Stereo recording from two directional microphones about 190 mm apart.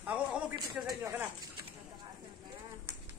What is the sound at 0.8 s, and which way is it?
Speech, 15° right (ahead or behind).